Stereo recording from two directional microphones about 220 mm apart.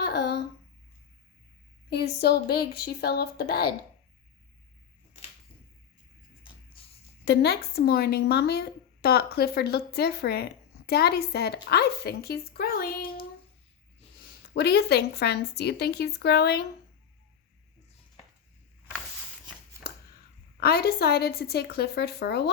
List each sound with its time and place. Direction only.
0.0 s a sound: 50° left (ahead or behind)
1.9 s speech: 45° left (ahead or behind)
7.3 s speech: 50° left (ahead or behind)
14.5 s speech: 50° left (ahead or behind)
20.6 s speech: 45° left (ahead or behind)